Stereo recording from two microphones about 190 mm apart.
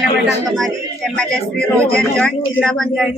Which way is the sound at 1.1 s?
5° left (ahead or behind).